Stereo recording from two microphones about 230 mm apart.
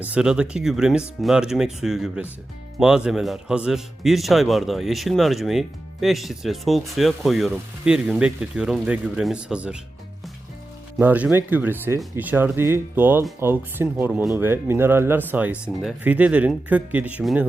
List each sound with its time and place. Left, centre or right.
0.0 s a man's voice: centre
10.9 s speech: centre